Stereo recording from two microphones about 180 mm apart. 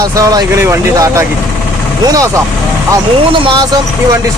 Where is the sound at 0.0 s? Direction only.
20° right (ahead or behind).